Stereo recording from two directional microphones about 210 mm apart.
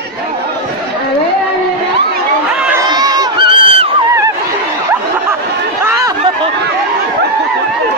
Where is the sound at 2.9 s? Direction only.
20° right (ahead or behind).